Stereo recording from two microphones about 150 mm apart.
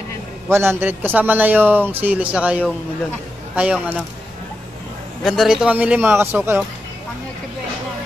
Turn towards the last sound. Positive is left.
turn(degrees=-15)  # may be behind; listen again after turning